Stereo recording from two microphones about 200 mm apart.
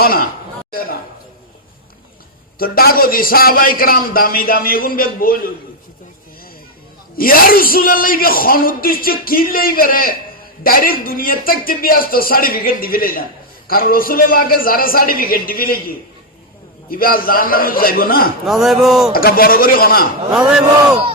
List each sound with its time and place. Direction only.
0.0 s a man's voice: 45° left (ahead or behind)
0.7 s a sound: 45° left (ahead or behind)
2.6 s a man's voice: 50° left (ahead or behind)
7.2 s a man's voice: 45° left (ahead or behind)
18.4 s speech: centre (ahead or behind)
19.1 s a man's voice: 45° left (ahead or behind)